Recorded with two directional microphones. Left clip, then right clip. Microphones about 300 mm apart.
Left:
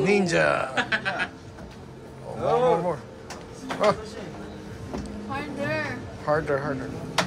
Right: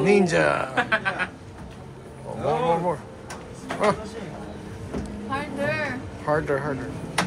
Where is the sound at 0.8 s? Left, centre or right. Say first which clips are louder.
Right 2 dB; centre.